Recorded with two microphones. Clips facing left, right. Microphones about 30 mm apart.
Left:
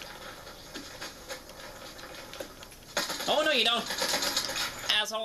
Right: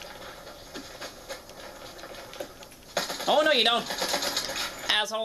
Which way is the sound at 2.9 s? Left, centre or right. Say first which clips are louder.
Right 4 dB; centre.